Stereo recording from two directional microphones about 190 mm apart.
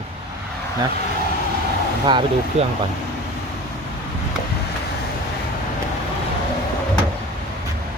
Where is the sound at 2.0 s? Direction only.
25° right (ahead or behind).